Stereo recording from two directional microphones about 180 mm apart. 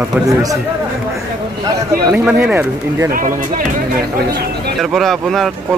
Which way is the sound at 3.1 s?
50° right (ahead or behind).